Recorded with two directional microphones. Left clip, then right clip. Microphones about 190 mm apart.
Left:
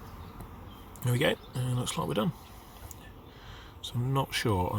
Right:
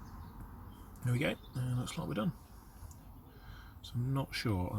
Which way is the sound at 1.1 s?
35° left (ahead or behind).